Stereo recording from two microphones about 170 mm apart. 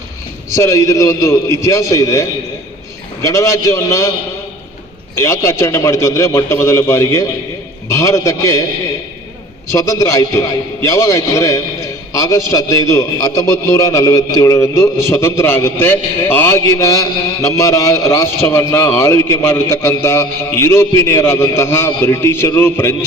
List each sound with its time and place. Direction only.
0.5 s a man's voice: 20° left (ahead or behind)
3.2 s a man's voice: 20° left (ahead or behind)
5.1 s a man's voice: 15° left (ahead or behind)
9.7 s a man's voice: 20° left (ahead or behind)